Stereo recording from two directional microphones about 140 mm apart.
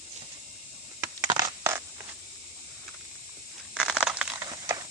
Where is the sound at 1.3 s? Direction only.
30° right (ahead or behind).